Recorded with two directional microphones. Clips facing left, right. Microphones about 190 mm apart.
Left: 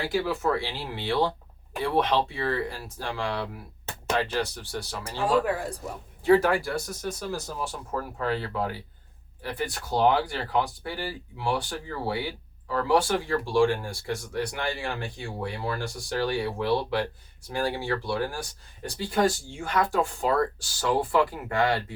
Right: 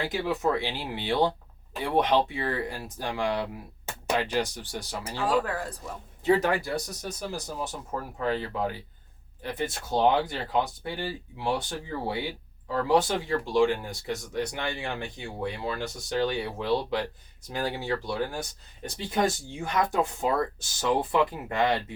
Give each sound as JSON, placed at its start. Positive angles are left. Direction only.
{"t": 0.0, "sound": "speech", "side_deg": -20}